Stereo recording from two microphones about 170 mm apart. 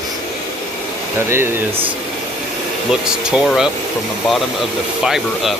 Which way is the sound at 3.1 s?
5° right (ahead or behind).